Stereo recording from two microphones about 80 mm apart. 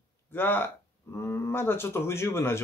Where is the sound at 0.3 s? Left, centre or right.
Left.